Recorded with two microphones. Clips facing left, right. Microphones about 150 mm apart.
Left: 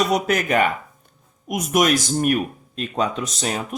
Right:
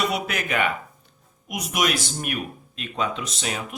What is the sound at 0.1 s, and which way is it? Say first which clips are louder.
Speech: left 7 dB; 40° left (ahead or behind).